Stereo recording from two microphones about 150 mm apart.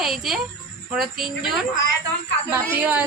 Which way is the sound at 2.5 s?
15° right (ahead or behind).